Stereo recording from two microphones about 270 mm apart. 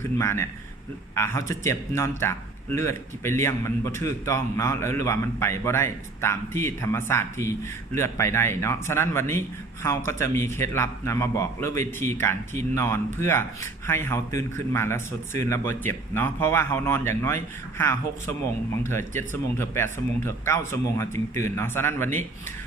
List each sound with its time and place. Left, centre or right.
0.2 s a man's voice: centre